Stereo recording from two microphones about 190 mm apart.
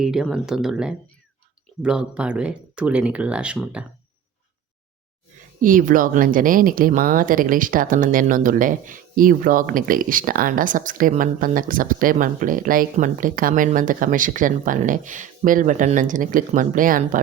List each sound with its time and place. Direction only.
0.0 s speech: 5° right (ahead or behind)
5.6 s speech: 45° right (ahead or behind)